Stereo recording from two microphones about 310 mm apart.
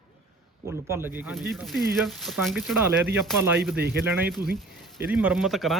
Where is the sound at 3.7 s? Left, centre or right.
Right.